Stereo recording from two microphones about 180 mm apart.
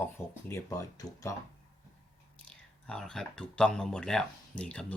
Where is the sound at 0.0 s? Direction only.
15° left (ahead or behind).